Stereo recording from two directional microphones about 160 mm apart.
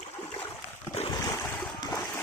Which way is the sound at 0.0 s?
40° left (ahead or behind).